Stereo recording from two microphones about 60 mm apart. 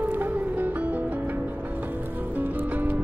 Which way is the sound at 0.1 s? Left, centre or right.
Right.